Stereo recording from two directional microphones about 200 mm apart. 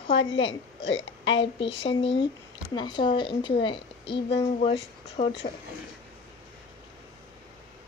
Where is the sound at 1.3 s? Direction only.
25° left (ahead or behind).